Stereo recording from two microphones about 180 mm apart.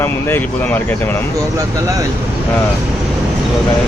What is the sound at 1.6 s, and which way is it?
Speech, 15° right (ahead or behind).